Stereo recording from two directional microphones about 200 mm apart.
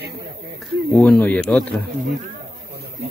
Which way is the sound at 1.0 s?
10° left (ahead or behind).